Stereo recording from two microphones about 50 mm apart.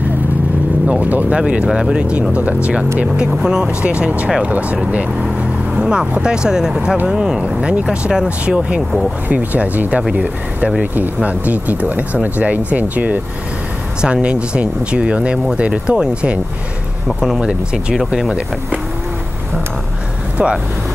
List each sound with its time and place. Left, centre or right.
0.8 s vehicle: right
1.3 s speech: right
3.3 s speech: centre
5.8 s speech: centre
9.3 s speech: right
11.2 s speech: right
14.0 s speech: centre
17.9 s speech: centre